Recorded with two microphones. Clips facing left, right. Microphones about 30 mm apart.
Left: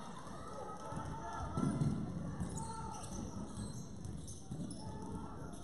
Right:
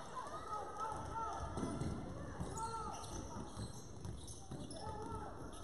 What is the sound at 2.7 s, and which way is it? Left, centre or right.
Basketball bounce, right.